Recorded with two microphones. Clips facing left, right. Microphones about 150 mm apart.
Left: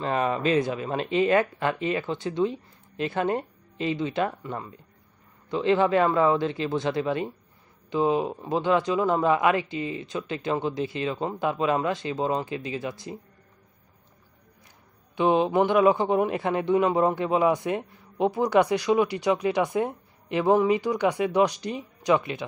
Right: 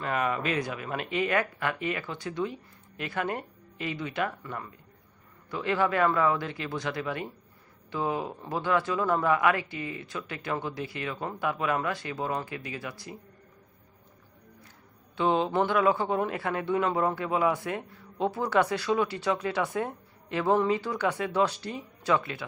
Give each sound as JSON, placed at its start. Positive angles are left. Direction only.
{"t": 0.0, "sound": "speech", "side_deg": 30}
{"t": 15.1, "sound": "a man's voice", "side_deg": 15}